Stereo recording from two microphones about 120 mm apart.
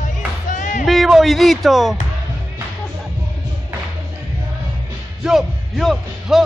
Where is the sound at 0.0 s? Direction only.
90° left.